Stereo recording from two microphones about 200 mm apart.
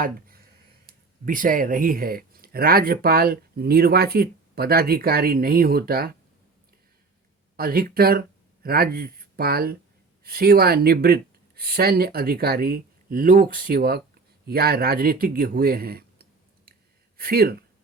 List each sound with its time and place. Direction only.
0.9 s speech: 45° right (ahead or behind)
7.5 s speech: 50° right (ahead or behind)